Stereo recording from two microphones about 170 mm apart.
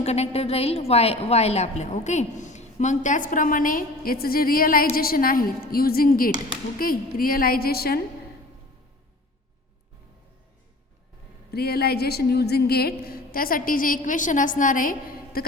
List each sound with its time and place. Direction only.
0.0 s a woman's voice: 40° left (ahead or behind); by 8.0 s 65° left (ahead or behind)
11.5 s a woman's voice: 65° left (ahead or behind)